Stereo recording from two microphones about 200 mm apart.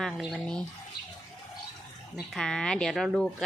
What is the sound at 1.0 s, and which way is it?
Bird, 50° left (ahead or behind).